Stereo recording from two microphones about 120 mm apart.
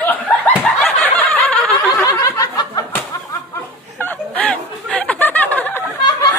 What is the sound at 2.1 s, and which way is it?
Snicker, 30° left (ahead or behind).